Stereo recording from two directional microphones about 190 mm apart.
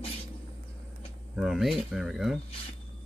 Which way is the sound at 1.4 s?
Centre (ahead or behind).